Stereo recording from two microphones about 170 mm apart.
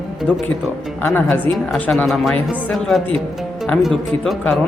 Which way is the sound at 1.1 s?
10° left (ahead or behind).